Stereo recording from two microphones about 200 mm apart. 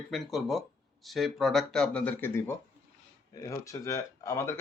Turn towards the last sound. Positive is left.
turn(degrees=15)  # may be behind; listen again after turning